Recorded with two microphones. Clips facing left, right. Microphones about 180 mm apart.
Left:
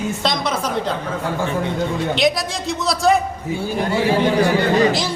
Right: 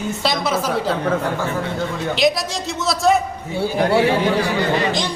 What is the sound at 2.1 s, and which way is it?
A woman's voice, centre (ahead or behind).